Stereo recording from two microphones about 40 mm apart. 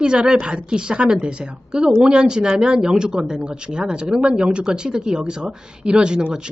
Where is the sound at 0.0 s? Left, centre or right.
Right.